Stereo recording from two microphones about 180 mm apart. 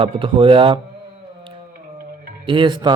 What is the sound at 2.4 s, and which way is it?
Speech, 25° right (ahead or behind).